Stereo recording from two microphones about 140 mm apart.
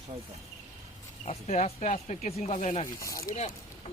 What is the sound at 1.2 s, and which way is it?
Speech, 50° left (ahead or behind).